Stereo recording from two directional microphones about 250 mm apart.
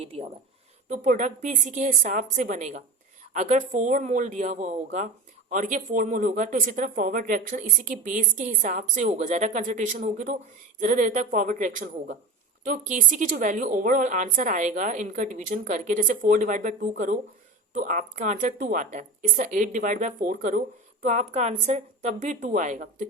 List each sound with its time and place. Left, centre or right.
0.0 s a woman's voice: right